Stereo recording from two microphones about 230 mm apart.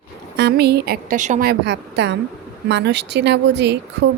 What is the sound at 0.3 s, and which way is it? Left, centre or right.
Speech, right.